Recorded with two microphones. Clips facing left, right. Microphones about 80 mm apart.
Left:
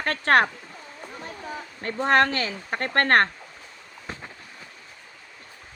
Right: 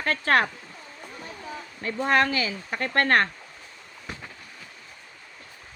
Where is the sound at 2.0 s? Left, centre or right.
Left.